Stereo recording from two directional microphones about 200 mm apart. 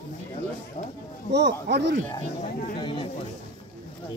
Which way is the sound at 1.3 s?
60° right (ahead or behind).